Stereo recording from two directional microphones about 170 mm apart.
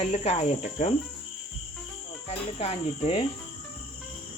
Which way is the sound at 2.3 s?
35° left (ahead or behind).